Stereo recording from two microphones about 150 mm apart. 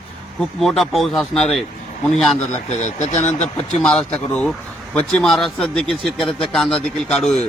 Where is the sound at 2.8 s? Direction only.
50° left (ahead or behind).